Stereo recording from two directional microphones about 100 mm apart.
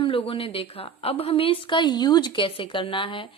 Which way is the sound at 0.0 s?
60° left (ahead or behind).